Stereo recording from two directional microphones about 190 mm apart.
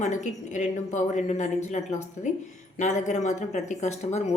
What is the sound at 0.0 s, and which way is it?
Speech, 40° left (ahead or behind).